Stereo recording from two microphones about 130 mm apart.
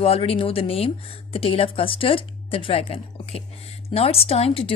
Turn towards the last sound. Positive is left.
turn(degrees=50)  # may be behind; listen again after turning